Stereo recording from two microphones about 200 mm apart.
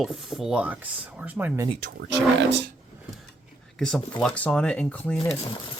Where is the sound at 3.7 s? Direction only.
5° left (ahead or behind).